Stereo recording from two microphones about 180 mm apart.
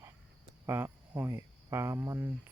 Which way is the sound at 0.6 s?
10° right (ahead or behind).